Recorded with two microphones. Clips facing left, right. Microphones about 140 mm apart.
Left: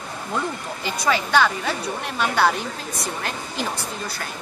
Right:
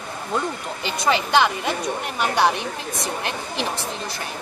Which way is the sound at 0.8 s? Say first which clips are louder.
Right 1 dB; 20° right (ahead or behind).